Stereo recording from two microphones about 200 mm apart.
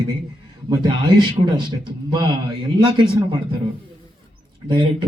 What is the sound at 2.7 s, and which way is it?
Speech, 25° right (ahead or behind).